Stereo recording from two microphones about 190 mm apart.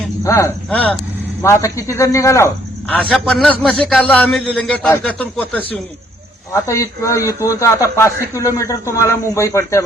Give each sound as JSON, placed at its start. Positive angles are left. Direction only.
{"t": 0.3, "sound": "a man's voice", "side_deg": 15}